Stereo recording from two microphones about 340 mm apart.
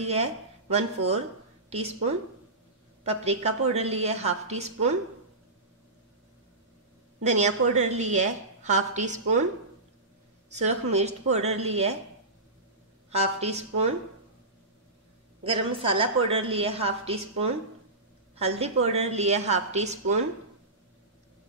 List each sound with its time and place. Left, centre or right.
0.0 s a woman's voice: centre
3.0 s a woman's voice: centre
7.2 s a woman's voice: centre
10.5 s a woman's voice: centre
13.1 s a woman's voice: centre
15.4 s a woman's voice: centre
18.3 s a woman's voice: centre